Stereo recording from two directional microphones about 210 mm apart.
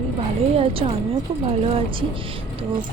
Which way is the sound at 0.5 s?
30° right (ahead or behind).